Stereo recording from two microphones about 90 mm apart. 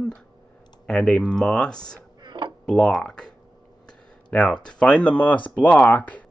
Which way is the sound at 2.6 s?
10° left (ahead or behind).